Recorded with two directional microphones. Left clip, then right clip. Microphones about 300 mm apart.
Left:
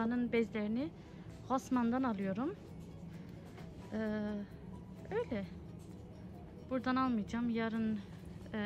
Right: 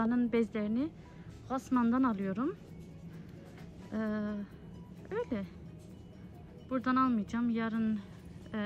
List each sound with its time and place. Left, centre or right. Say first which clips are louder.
0.0 s a sound: right 3 dB; centre
1.5 s speech: right 3 dB; centre
4.0 s speech: right 2 dB; centre
6.7 s speech: right 4 dB; centre